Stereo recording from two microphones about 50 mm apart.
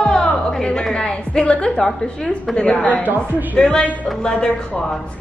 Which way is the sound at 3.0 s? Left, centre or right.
Right.